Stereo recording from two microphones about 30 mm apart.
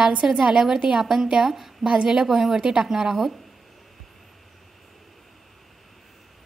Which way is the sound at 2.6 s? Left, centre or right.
Right.